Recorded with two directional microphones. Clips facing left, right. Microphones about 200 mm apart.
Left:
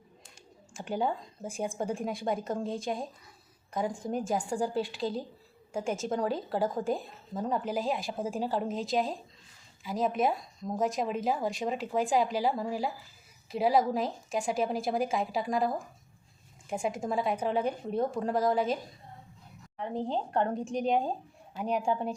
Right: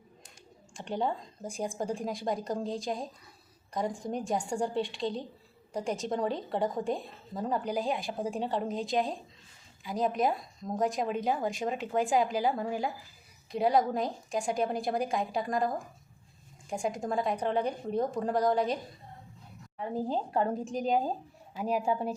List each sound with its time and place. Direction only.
0.7 s a woman's voice: 5° left (ahead or behind)
19.8 s a woman's voice: 5° right (ahead or behind)